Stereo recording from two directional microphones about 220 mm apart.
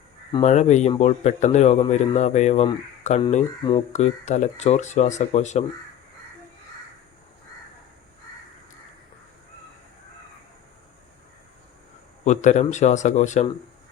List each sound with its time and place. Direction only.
0.4 s speech: 30° left (ahead or behind)
12.2 s speech: 30° left (ahead or behind)